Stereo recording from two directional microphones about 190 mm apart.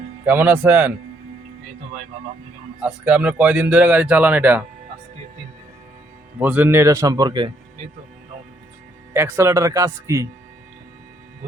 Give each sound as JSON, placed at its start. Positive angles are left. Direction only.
{"t": 0.3, "sound": "speech", "side_deg": -10}
{"t": 2.8, "sound": "speech", "side_deg": -5}
{"t": 6.4, "sound": "speech", "side_deg": -10}
{"t": 9.1, "sound": "speech", "side_deg": -10}